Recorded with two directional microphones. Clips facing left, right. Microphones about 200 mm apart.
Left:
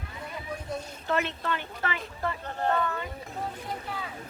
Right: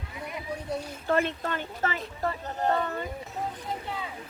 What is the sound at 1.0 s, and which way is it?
Speech, 45° right (ahead or behind).